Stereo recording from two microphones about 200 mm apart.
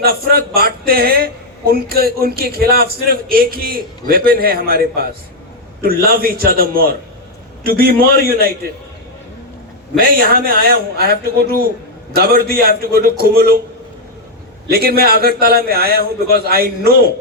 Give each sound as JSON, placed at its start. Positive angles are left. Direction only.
{"t": 0.0, "sound": "a man's voice", "side_deg": -50}
{"t": 10.0, "sound": "a man's voice", "side_deg": -50}
{"t": 14.7, "sound": "a man's voice", "side_deg": -50}